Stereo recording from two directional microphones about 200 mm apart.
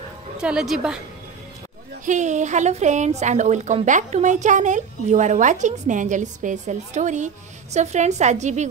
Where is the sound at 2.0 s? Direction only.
35° right (ahead or behind).